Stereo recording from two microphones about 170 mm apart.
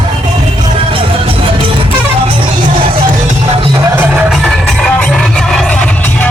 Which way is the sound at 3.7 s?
20° right (ahead or behind).